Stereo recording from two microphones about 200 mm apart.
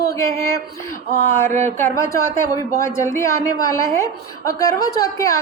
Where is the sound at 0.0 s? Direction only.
15° left (ahead or behind).